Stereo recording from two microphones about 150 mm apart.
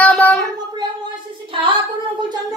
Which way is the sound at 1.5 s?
35° right (ahead or behind).